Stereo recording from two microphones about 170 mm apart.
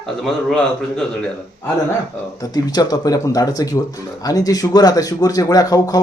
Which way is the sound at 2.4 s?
20° left (ahead or behind).